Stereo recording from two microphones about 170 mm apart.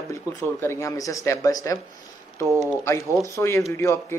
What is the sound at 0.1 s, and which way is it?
A man's voice, 15° left (ahead or behind).